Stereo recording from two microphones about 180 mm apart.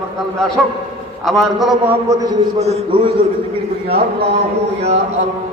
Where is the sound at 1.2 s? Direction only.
Centre (ahead or behind).